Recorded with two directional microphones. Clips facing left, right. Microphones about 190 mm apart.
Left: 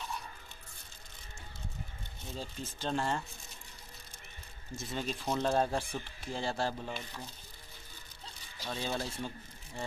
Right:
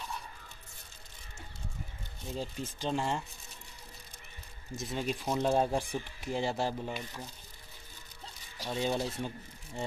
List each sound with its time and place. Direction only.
2.3 s speech: 15° right (ahead or behind)
4.7 s speech: 15° right (ahead or behind)
8.6 s speech: 15° right (ahead or behind)